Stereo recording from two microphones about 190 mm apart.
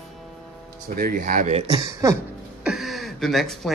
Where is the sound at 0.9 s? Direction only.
50° right (ahead or behind); by 1.8 s 30° right (ahead or behind).